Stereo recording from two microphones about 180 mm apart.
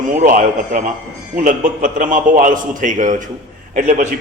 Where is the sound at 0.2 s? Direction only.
50° right (ahead or behind).